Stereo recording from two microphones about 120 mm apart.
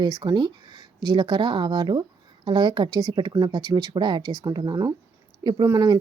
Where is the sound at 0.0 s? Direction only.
40° right (ahead or behind).